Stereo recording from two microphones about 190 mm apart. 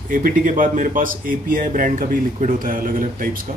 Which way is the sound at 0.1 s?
45° right (ahead or behind).